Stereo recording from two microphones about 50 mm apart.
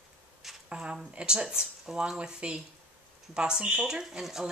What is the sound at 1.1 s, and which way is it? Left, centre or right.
Speech, centre.